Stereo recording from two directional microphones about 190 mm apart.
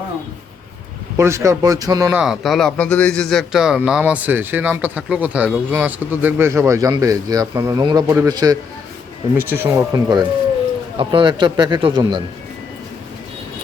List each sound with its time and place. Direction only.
1.1 s a man's voice: 15° right (ahead or behind)
2.1 s a man's voice: centre (ahead or behind); by 12.2 s 25° right (ahead or behind)